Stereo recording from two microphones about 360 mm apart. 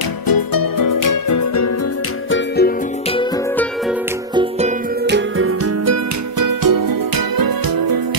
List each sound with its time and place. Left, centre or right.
0.3 s music: left
2.3 s music: left
5.0 s music: right
6.4 s music: right
7.3 s music: right